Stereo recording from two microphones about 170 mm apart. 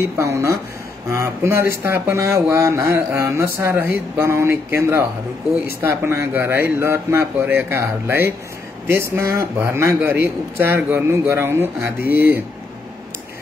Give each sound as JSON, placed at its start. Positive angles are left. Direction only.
{"t": 0.0, "sound": "a man's voice", "side_deg": -15}
{"t": 12.0, "sound": "speech", "side_deg": 60}